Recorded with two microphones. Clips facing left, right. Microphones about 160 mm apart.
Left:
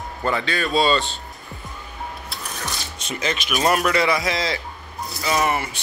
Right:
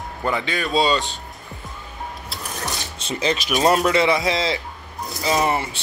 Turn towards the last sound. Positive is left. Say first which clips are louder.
# right 1 dB
turn(degrees=-25)  # may be behind; listen again after turning